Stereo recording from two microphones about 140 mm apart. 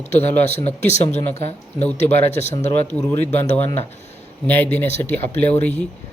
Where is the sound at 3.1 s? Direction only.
15° left (ahead or behind).